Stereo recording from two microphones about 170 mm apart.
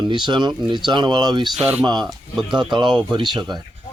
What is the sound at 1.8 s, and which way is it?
Speech, 25° right (ahead or behind).